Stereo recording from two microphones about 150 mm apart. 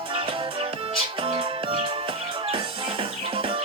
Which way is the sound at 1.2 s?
35° right (ahead or behind).